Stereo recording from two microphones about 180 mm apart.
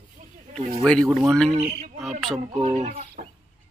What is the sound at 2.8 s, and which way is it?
Speech, 40° right (ahead or behind).